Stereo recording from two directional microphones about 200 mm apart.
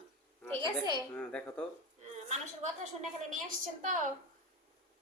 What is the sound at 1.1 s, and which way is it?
Speech, 5° left (ahead or behind).